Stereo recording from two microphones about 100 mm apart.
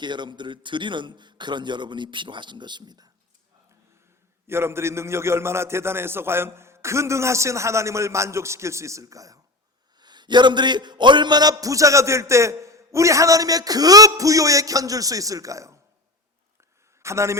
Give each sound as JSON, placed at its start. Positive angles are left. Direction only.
{"t": 0.0, "sound": "a man's voice", "side_deg": -50}
{"t": 4.4, "sound": "a man's voice", "side_deg": -25}
{"t": 10.0, "sound": "a man's voice", "side_deg": -45}
{"t": 17.0, "sound": "a man's voice", "side_deg": -30}